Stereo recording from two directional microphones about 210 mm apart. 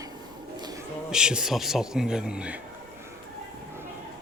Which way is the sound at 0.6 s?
20° right (ahead or behind).